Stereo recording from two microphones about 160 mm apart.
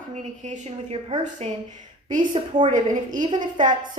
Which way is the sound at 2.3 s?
30° right (ahead or behind).